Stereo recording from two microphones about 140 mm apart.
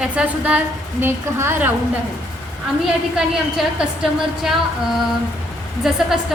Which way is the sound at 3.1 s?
5° right (ahead or behind).